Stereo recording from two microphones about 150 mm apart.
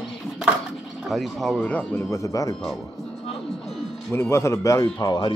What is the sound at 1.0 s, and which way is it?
Speech, centre (ahead or behind).